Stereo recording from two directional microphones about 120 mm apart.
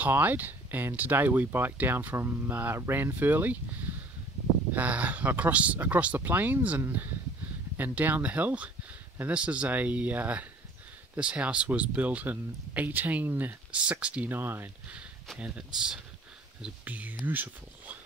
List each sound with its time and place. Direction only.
0.0 s speech: 15° right (ahead or behind)